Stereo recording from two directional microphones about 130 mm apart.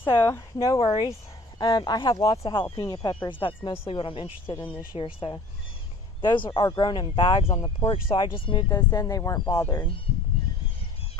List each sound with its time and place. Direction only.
0.0 s speech: 20° left (ahead or behind); by 2.3 s 35° left (ahead or behind)
2.3 s speech: 45° left (ahead or behind)
2.6 s speech: 30° left (ahead or behind)
4.5 s speech: 15° left (ahead or behind)
4.9 s speech: 40° left (ahead or behind); by 9.8 s 25° left (ahead or behind)